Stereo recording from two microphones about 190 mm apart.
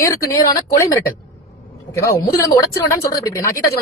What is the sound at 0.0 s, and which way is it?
Speech, 15° left (ahead or behind).